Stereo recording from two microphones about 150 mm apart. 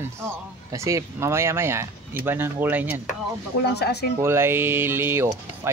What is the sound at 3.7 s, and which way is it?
Speech, 90° left.